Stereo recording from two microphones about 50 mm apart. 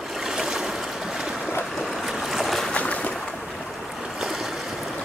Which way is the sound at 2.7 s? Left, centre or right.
Left.